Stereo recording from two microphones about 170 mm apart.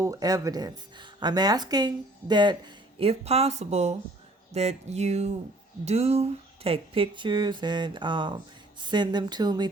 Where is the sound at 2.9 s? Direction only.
35° right (ahead or behind).